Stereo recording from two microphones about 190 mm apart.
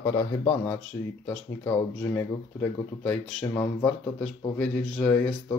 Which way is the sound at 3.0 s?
10° left (ahead or behind).